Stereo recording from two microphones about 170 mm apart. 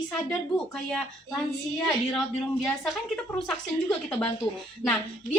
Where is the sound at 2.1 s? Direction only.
Centre (ahead or behind).